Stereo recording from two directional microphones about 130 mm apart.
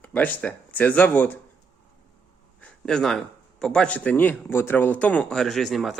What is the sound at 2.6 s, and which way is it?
A man's voice, 5° left (ahead or behind).